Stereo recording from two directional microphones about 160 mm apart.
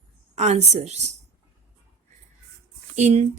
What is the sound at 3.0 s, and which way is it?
Speech, 50° right (ahead or behind).